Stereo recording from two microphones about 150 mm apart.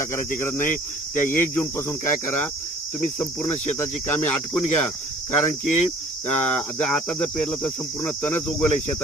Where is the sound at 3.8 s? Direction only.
15° left (ahead or behind).